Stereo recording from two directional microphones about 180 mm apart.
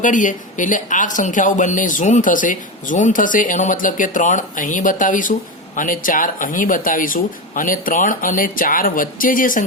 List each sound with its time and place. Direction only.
0.0 s speech: 45° left (ahead or behind)